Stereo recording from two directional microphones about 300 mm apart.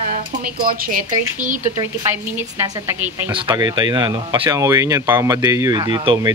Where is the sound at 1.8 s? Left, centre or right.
Centre.